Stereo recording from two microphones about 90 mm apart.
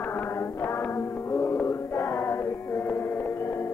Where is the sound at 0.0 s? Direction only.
20° left (ahead or behind).